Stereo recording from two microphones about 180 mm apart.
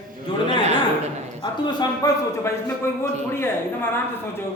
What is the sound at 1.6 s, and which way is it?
Speech, 20° left (ahead or behind).